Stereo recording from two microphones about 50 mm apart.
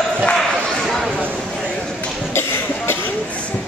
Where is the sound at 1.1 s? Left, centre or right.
Right.